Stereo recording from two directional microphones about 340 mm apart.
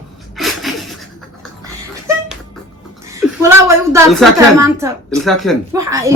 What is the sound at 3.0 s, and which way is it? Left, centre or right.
A woman's voice, centre.